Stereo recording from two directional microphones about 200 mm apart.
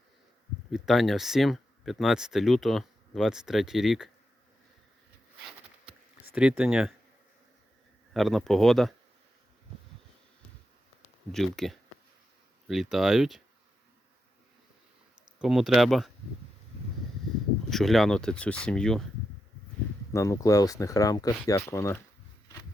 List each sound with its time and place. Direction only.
0.7 s speech: centre (ahead or behind)
6.3 s speech: 5° right (ahead or behind)
8.1 s speech: centre (ahead or behind)
11.3 s speech: centre (ahead or behind)
15.4 s speech: centre (ahead or behind)
17.7 s speech: centre (ahead or behind)
20.1 s speech: 15° left (ahead or behind)